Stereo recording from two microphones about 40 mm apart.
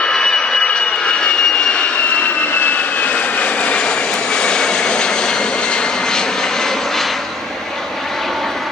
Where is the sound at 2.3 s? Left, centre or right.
Left.